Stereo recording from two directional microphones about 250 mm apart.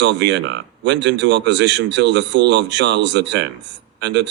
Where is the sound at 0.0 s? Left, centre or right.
Right.